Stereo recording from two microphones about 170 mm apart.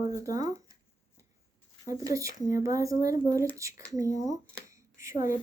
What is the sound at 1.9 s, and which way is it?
A child's voice, 20° right (ahead or behind).